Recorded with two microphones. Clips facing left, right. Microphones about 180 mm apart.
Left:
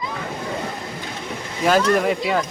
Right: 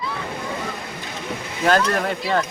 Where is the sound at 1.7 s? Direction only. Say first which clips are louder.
Left 2 dB; 10° left (ahead or behind).